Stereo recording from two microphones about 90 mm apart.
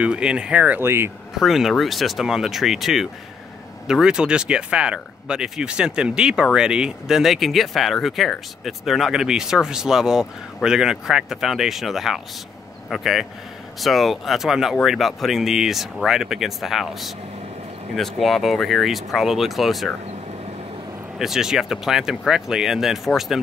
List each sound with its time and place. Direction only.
0.0 s speech: 10° right (ahead or behind)
0.8 s speech: 25° right (ahead or behind)
1.4 s speech: centre (ahead or behind)
21.2 s speech: 5° right (ahead or behind)